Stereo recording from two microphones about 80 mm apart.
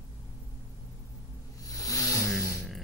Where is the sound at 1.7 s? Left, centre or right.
Left.